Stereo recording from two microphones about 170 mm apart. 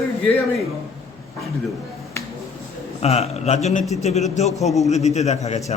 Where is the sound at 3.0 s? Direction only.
40° left (ahead or behind).